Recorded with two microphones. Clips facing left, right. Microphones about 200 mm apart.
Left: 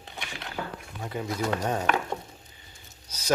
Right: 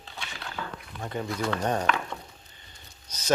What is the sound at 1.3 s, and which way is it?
Speech, 40° left (ahead or behind).